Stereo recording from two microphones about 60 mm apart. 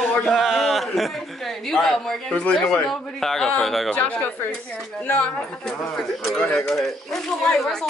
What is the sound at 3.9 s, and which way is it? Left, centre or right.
Speech, left.